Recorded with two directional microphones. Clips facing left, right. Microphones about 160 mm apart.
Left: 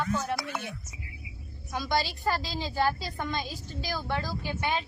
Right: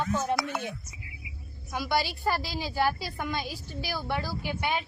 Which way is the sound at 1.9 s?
15° right (ahead or behind).